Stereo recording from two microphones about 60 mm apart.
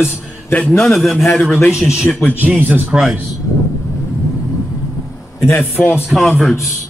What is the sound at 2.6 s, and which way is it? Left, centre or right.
Speech, right.